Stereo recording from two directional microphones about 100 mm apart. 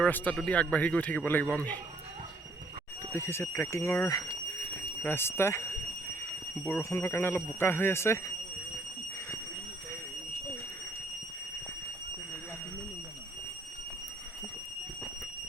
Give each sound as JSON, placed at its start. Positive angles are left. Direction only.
{"t": 0.0, "sound": "speech", "side_deg": 15}
{"t": 3.1, "sound": "speech", "side_deg": 25}